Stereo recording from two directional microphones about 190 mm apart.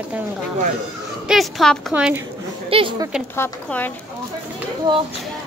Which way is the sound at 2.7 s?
25° right (ahead or behind).